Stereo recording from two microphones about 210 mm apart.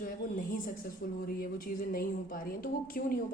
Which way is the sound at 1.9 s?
45° left (ahead or behind).